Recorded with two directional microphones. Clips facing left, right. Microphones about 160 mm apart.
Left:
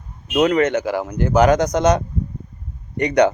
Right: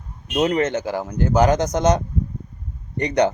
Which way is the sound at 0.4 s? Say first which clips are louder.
Left 3 dB; 25° right (ahead or behind).